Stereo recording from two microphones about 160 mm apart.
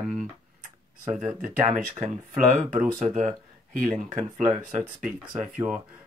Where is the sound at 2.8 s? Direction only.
55° right (ahead or behind).